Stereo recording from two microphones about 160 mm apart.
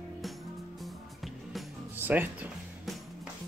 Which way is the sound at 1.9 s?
10° right (ahead or behind).